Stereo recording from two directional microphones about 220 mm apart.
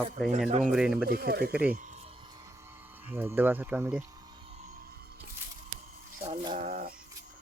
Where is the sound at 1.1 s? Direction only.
45° right (ahead or behind).